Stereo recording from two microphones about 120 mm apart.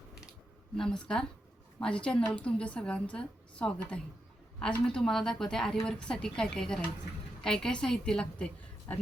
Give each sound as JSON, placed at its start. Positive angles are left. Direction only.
{"t": 0.8, "sound": "a woman's voice", "side_deg": 5}